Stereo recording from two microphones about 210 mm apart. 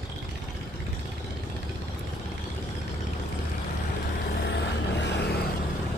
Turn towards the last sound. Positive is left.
turn(degrees=55)  # may be behind; listen again after turning